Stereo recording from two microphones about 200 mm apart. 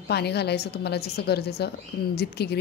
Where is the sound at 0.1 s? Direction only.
55° left (ahead or behind).